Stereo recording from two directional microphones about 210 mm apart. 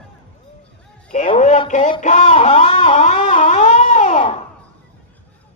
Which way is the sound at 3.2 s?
35° left (ahead or behind).